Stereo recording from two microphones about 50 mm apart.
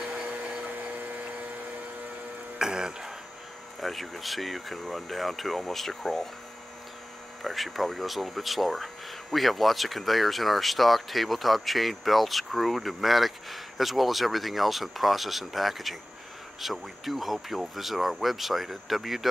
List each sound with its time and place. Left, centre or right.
0.0 s vacuum cleaner: centre
0.9 s a sound: right
2.6 s music: centre
3.8 s speech: centre
7.4 s speech: centre